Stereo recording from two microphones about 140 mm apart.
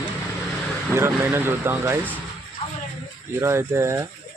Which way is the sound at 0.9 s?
15° right (ahead or behind).